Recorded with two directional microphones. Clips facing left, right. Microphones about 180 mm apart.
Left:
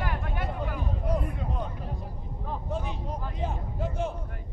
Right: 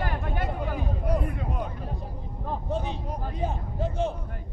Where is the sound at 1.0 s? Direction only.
10° right (ahead or behind).